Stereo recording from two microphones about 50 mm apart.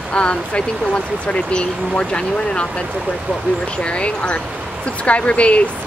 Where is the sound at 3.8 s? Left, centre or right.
Left.